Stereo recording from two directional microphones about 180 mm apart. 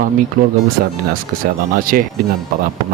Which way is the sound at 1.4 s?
50° right (ahead or behind).